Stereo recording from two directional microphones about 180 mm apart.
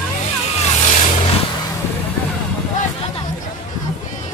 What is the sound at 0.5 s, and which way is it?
Vehicle, 40° left (ahead or behind).